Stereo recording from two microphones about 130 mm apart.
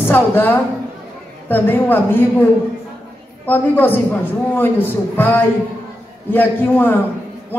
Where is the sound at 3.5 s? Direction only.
15° left (ahead or behind).